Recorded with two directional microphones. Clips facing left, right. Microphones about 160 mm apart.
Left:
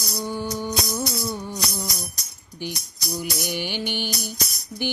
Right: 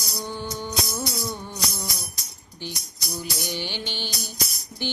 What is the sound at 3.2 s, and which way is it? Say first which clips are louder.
Music: left 2 dB; 15° left (ahead or behind).